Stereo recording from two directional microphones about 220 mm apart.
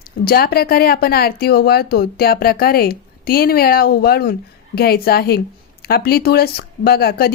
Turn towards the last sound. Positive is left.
turn(degrees=45)  # may be behind; listen again after turning